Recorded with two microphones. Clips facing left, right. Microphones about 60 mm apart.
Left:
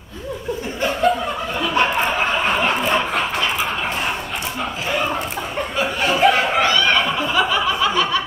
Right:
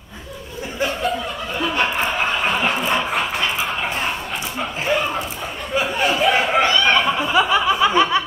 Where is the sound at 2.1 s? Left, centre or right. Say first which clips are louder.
Left 1 dB; centre.